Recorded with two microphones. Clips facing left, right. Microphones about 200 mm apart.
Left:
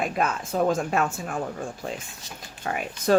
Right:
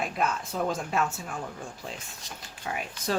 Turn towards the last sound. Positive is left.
turn(degrees=55)  # may be behind; listen again after turning